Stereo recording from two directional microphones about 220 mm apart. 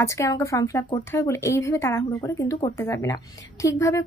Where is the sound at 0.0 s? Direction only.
15° left (ahead or behind).